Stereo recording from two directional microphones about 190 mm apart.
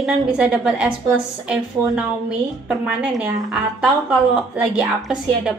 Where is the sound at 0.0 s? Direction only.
5° right (ahead or behind).